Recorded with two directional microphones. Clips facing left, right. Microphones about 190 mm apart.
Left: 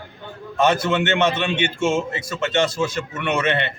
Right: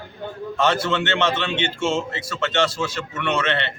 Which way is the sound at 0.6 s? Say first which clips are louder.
Left 3 dB; 15° left (ahead or behind).